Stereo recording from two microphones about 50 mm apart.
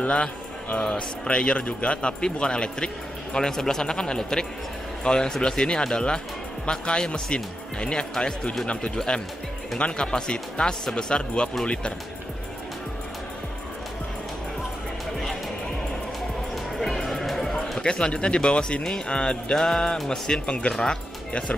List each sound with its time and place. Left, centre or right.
0.0 s speech: left
16.7 s music: centre
17.7 s speech: centre
21.3 s speech: left